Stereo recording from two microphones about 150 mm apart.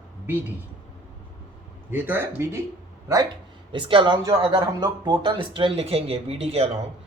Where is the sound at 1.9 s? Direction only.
15° right (ahead or behind).